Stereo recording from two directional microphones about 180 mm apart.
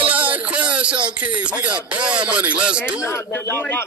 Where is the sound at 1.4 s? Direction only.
5° right (ahead or behind).